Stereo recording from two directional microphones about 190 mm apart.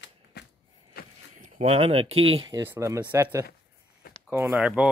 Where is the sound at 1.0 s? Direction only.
55° left (ahead or behind).